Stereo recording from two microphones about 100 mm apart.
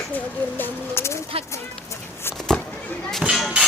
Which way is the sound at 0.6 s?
25° left (ahead or behind).